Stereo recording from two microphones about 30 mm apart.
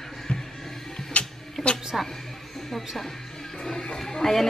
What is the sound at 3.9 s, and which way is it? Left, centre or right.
Speech, centre.